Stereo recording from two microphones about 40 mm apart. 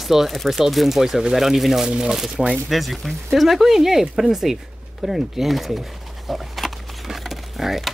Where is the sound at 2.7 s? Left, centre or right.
Centre.